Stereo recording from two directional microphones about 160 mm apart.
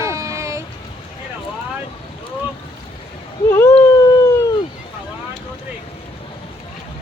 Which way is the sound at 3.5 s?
15° left (ahead or behind).